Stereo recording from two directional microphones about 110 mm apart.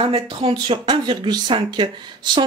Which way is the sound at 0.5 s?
45° right (ahead or behind).